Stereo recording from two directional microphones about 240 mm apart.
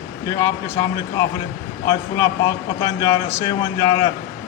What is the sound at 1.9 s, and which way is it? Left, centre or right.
A man's voice, centre.